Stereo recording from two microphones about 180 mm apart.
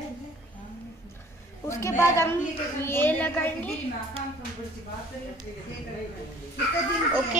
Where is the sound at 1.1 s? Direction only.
15° left (ahead or behind).